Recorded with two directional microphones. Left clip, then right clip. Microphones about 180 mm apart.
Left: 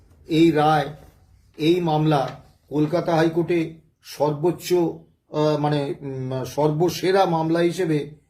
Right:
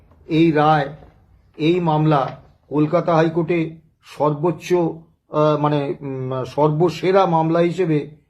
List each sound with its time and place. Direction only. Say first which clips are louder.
0.3 s speech: right 2 dB; 15° left (ahead or behind)